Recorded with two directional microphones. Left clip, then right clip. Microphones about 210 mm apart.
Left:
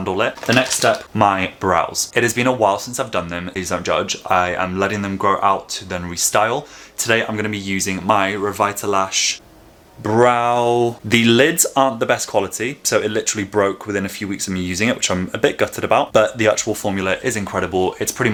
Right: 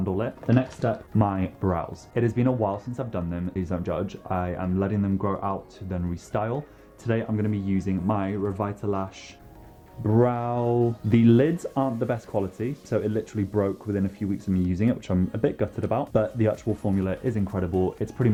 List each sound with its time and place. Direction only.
0.0 s speech: 10° left (ahead or behind)
10.0 s speech: 20° left (ahead or behind)
10.6 s speech: 40° left (ahead or behind)
11.1 s speech: 10° left (ahead or behind)
17.7 s speech: 40° left (ahead or behind)